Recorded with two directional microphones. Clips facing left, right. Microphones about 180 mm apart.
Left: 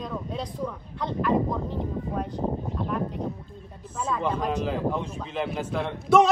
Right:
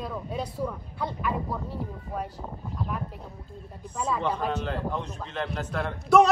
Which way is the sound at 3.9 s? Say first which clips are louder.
Left 1 dB; 5° left (ahead or behind).